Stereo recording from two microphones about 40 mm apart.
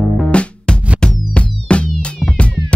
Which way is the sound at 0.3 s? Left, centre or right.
Left.